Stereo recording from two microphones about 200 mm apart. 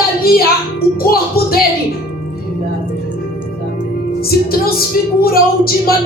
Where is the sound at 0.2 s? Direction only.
50° left (ahead or behind).